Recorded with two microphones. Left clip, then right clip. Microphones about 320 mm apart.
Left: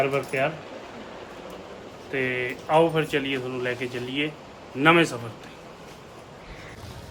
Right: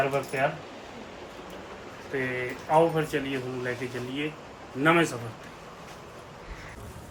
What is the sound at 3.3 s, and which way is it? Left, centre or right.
Speech, centre.